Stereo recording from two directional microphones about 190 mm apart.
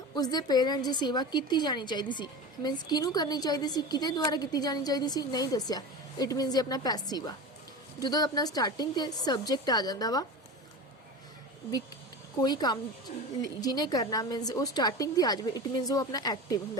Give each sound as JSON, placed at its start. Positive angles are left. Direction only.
{"t": 0.1, "sound": "a woman's voice", "side_deg": 20}
{"t": 12.4, "sound": "a woman's voice", "side_deg": 20}
{"t": 13.1, "sound": "speech", "side_deg": 40}
{"t": 13.6, "sound": "a woman's voice", "side_deg": 20}